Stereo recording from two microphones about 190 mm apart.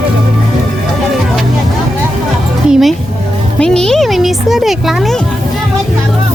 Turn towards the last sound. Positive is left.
turn(degrees=0)  # may be behind; listen again after turning